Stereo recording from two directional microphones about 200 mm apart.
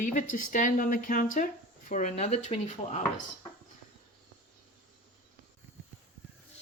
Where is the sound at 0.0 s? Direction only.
40° left (ahead or behind).